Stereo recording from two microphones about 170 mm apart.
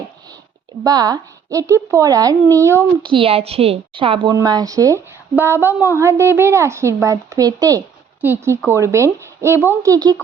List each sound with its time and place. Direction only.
0.9 s speech: 20° right (ahead or behind)
3.0 s a woman's voice: 30° right (ahead or behind)